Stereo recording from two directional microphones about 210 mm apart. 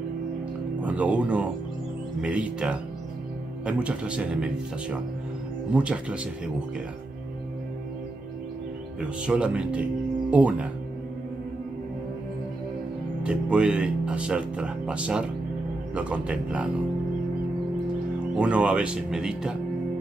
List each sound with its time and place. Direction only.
0.7 s speech: 5° right (ahead or behind)
9.2 s speech: 5° right (ahead or behind)
13.2 s speech: 5° right (ahead or behind)
18.3 s speech: 5° right (ahead or behind)